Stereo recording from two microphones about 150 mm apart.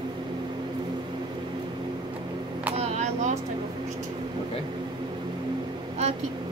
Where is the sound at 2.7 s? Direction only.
45° right (ahead or behind).